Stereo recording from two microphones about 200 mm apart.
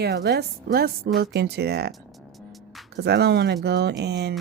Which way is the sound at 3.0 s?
55° right (ahead or behind).